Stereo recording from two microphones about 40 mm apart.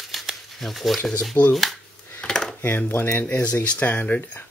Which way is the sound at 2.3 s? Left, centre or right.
Centre.